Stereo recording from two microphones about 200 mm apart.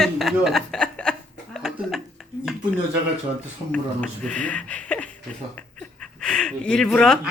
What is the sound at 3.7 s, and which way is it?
Speech, 5° left (ahead or behind).